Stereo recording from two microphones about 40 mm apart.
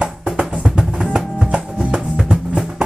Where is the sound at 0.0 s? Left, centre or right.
Right.